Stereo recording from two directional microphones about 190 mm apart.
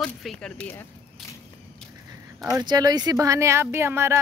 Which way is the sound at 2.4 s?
20° right (ahead or behind).